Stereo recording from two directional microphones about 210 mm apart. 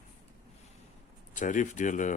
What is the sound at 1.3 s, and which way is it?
Speech, 35° left (ahead or behind).